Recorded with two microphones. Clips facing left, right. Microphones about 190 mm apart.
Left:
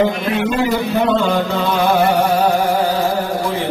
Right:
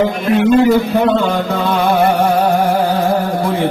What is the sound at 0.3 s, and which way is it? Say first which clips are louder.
Speech: right 7 dB; 50° right (ahead or behind).